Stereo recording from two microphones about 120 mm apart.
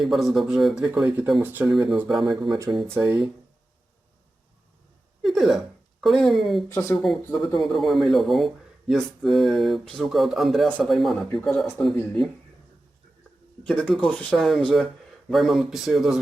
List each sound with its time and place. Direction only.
0.0 s speech: centre (ahead or behind)
1.6 s speech: 5° right (ahead or behind)
5.2 s speech: centre (ahead or behind)
6.7 s speech: 20° left (ahead or behind)
6.9 s speech: centre (ahead or behind)
13.7 s speech: 5° left (ahead or behind)
14.3 s speech: centre (ahead or behind)